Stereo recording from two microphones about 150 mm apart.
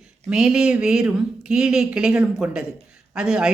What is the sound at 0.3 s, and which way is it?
A woman's voice, 5° right (ahead or behind).